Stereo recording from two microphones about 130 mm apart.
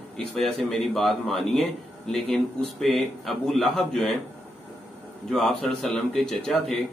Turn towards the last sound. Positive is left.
turn(degrees=5)  # may be behind; listen again after turning